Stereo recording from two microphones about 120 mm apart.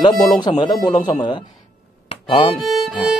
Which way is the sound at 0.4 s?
40° left (ahead or behind).